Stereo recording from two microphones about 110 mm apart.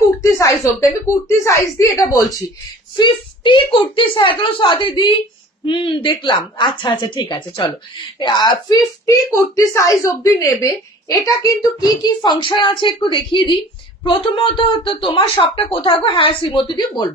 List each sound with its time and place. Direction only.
0.2 s a sound: 30° left (ahead or behind)
1.4 s a woman's voice: 25° left (ahead or behind)
3.0 s speech: 50° left (ahead or behind)